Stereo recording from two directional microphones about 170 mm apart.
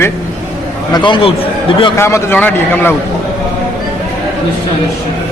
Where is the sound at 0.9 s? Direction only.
30° left (ahead or behind).